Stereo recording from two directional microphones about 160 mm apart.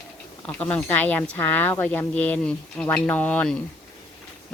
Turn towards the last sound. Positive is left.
turn(degrees=10)  # may be behind; listen again after turning